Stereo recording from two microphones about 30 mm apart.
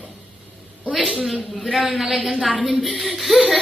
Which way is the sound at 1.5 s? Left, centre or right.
Centre.